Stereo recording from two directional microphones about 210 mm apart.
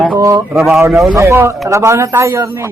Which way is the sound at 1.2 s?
15° right (ahead or behind).